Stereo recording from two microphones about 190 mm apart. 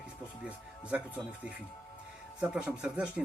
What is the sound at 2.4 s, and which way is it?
Speech, 5° right (ahead or behind).